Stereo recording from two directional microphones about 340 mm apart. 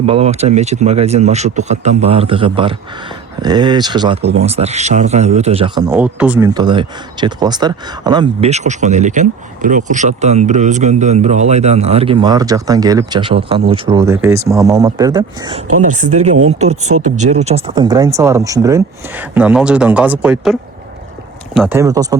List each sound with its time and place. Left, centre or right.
0.0 s a man's voice: centre
16.9 s speech: right
17.2 s a man's voice: centre